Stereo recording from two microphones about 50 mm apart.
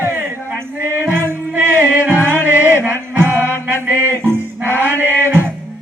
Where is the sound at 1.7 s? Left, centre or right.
Right.